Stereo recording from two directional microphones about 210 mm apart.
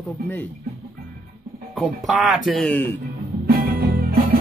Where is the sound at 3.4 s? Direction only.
45° right (ahead or behind).